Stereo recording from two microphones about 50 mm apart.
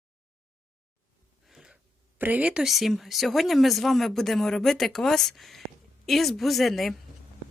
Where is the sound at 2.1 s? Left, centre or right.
Right.